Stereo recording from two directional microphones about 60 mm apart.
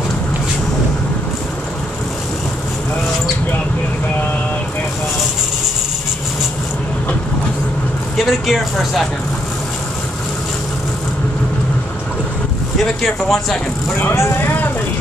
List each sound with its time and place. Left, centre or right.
8.2 s speech: centre
12.8 s speech: centre
14.1 s speech: left